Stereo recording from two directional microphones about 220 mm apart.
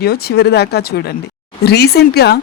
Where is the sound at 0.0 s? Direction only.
45° left (ahead or behind).